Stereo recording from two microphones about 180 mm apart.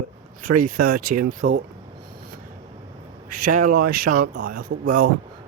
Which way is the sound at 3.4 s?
45° right (ahead or behind).